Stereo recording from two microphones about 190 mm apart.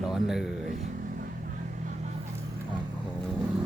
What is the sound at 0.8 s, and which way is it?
Vehicle, 45° right (ahead or behind).